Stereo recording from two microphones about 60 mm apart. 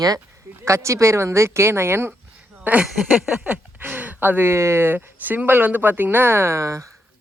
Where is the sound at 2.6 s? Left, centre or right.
Right.